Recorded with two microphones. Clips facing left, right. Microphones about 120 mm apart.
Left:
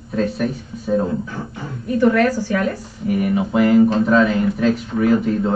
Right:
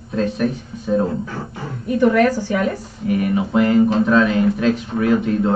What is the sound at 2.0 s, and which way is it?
Speech, 15° right (ahead or behind).